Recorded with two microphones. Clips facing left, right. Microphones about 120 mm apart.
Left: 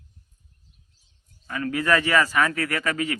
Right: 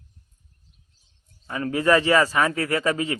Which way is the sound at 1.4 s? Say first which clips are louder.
Right 3 dB; 25° right (ahead or behind).